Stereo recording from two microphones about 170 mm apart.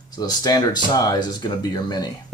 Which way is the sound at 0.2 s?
25° left (ahead or behind).